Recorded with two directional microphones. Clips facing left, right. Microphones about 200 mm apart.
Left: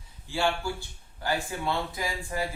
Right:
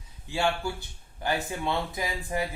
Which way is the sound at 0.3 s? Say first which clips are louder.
Even; 20° right (ahead or behind).